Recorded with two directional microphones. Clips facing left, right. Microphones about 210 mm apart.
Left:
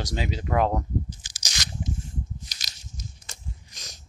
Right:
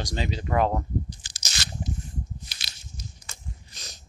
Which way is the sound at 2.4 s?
45° left (ahead or behind).